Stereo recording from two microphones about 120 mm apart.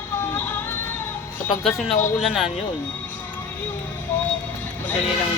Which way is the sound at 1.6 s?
Centre (ahead or behind).